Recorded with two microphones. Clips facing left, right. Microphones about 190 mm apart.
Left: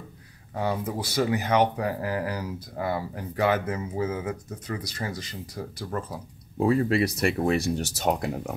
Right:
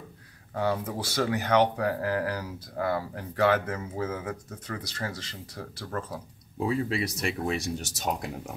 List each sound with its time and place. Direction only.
0.6 s speech: 15° left (ahead or behind)
6.6 s speech: 55° left (ahead or behind)